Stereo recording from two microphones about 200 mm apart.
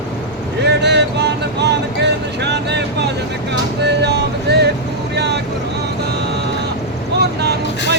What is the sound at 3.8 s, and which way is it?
Vehicle, 55° right (ahead or behind).